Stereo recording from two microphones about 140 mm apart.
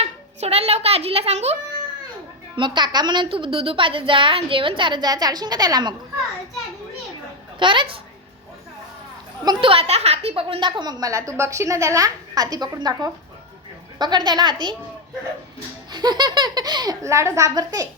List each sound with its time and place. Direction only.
0.0 s a child's voice: 45° right (ahead or behind)
2.6 s a woman's voice: 35° right (ahead or behind)
7.6 s a woman's voice: 35° right (ahead or behind)
9.4 s a woman's voice: 35° right (ahead or behind)
15.9 s a woman's voice: 30° right (ahead or behind)